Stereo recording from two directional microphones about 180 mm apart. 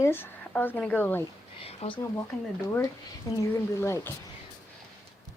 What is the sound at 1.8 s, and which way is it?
Speech, 35° left (ahead or behind).